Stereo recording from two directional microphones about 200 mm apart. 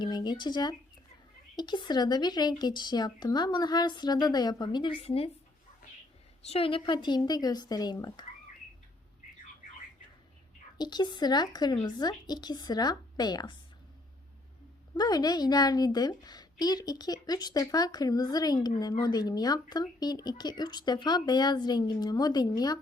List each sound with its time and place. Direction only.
0.0 s a woman's voice: 20° left (ahead or behind)
6.4 s a woman's voice: 30° left (ahead or behind)
10.8 s a woman's voice: 20° left (ahead or behind)
14.9 s a woman's voice: 20° left (ahead or behind)